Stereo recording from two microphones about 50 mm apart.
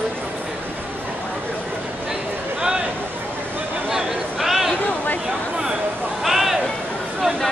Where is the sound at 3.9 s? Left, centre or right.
Centre.